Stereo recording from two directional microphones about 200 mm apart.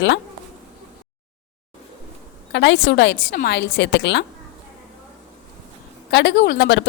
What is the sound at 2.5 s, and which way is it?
A woman's voice, 60° left (ahead or behind).